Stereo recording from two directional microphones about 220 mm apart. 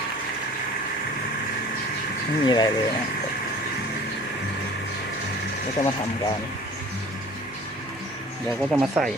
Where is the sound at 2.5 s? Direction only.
20° left (ahead or behind).